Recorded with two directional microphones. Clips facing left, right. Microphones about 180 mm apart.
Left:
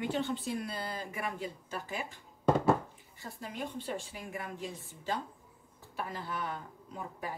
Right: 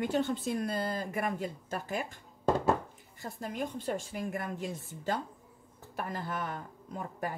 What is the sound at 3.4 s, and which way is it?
A woman's voice, 50° right (ahead or behind).